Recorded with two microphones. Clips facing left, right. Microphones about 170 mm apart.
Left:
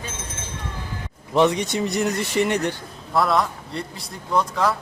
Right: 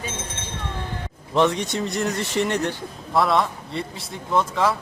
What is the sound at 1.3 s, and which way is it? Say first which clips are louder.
A man's voice: left 2 dB; 5° left (ahead or behind).